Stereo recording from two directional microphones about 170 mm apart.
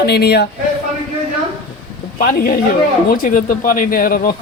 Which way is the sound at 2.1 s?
60° left (ahead or behind).